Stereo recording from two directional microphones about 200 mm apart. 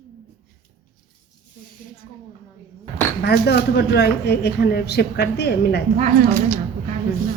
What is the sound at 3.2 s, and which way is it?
Speech, 55° left (ahead or behind).